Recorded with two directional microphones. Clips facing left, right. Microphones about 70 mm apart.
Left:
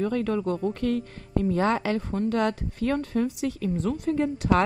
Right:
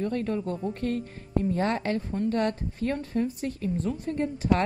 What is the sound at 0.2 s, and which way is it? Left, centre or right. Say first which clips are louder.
A woman's voice: left 4 dB; left.